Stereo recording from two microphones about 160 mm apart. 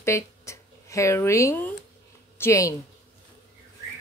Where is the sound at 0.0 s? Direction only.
20° left (ahead or behind).